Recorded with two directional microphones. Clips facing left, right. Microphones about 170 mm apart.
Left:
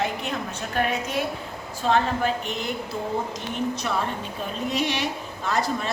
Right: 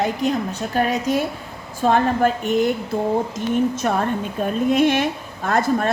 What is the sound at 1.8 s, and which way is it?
Speech, 50° right (ahead or behind).